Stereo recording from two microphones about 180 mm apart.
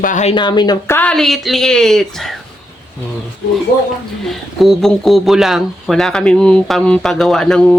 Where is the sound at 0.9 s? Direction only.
5° left (ahead or behind).